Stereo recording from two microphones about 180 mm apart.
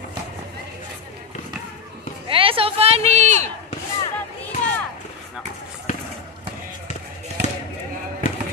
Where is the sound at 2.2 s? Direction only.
30° right (ahead or behind).